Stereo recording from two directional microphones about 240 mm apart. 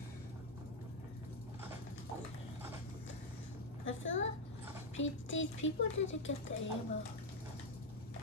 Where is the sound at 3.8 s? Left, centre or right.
Left.